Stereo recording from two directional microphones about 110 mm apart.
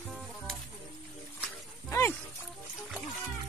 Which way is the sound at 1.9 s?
20° left (ahead or behind).